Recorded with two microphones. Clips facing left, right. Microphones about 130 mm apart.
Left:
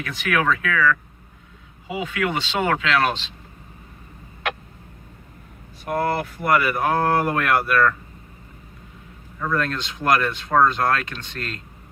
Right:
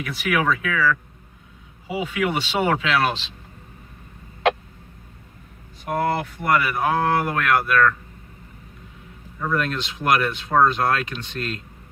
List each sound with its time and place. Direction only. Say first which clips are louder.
0.0 s speech: even; 10° right (ahead or behind)
2.0 s speech: right 1 dB; 15° right (ahead or behind)
5.9 s speech: even; centre (ahead or behind)
9.4 s speech: even; 10° right (ahead or behind)